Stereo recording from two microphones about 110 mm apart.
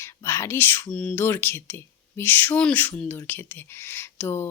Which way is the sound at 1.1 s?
20° left (ahead or behind).